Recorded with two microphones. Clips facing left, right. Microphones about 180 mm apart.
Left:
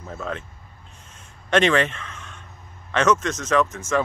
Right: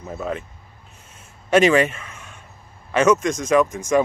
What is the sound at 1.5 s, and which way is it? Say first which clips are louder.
Speech: right 4 dB; 10° right (ahead or behind).